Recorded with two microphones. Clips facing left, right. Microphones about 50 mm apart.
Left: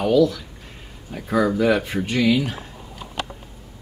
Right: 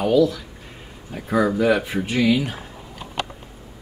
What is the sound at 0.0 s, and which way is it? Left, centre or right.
Speech, centre.